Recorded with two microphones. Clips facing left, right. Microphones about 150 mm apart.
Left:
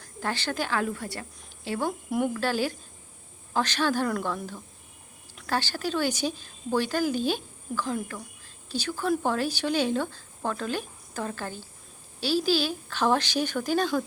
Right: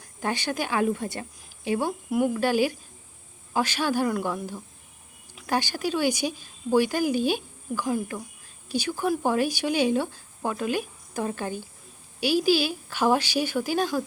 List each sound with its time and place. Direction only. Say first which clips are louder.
0.2 s speech: right 2 dB; 15° right (ahead or behind)
2.0 s speech: right 4 dB; centre (ahead or behind)
2.3 s speech: right 4 dB; 15° right (ahead or behind)
5.5 s speech: right 2 dB; 15° right (ahead or behind)